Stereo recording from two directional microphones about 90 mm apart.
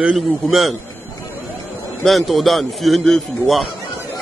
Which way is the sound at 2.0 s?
Centre (ahead or behind).